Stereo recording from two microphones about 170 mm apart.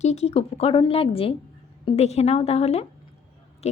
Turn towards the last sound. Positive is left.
turn(degrees=40)  # may be behind; listen again after turning